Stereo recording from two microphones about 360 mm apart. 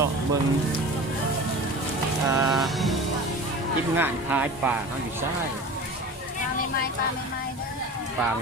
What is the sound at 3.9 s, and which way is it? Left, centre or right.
Speech, centre.